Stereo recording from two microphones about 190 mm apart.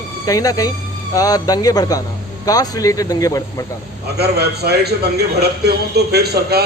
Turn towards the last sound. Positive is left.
turn(degrees=-60)  # may be behind; listen again after turning